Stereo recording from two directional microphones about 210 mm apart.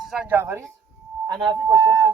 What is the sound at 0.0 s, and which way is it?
A man's voice, 5° right (ahead or behind).